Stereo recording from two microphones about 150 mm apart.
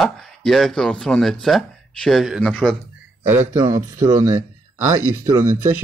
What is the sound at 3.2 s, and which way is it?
A man's voice, 15° right (ahead or behind).